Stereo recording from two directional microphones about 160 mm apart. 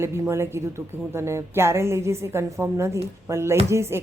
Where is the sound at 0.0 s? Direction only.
15° right (ahead or behind).